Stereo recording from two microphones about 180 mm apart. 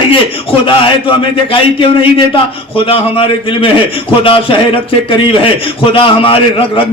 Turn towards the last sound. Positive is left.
turn(degrees=30)  # may be behind; listen again after turning